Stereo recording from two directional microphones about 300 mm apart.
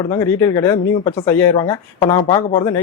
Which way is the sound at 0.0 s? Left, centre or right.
Centre.